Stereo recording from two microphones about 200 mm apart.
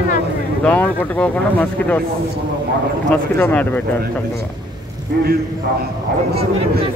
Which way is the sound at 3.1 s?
10° left (ahead or behind).